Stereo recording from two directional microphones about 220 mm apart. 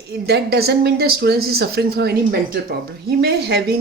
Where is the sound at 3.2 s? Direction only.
45° right (ahead or behind).